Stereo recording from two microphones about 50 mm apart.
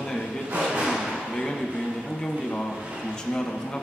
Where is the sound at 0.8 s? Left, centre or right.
Centre.